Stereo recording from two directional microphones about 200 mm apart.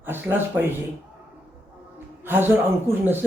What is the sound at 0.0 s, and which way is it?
Speech, 10° right (ahead or behind).